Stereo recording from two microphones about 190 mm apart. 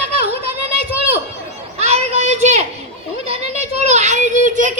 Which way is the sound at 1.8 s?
35° right (ahead or behind).